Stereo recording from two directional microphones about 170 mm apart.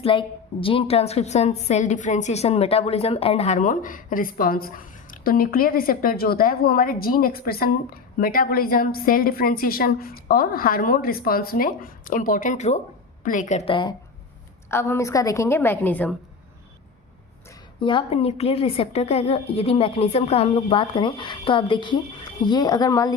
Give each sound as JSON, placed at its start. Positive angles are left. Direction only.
{"t": 0.0, "sound": "a woman's voice", "side_deg": 30}
{"t": 14.7, "sound": "a woman's voice", "side_deg": 15}
{"t": 17.7, "sound": "a woman's voice", "side_deg": 30}